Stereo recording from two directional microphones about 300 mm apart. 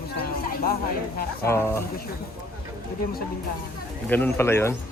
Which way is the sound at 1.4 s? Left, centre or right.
Centre.